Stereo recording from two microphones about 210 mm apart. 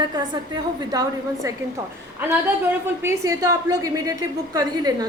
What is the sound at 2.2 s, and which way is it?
A woman's voice, 10° right (ahead or behind).